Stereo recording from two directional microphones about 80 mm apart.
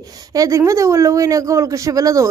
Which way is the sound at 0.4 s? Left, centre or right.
Right.